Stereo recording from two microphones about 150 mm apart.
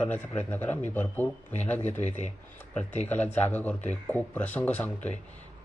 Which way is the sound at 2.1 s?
50° left (ahead or behind).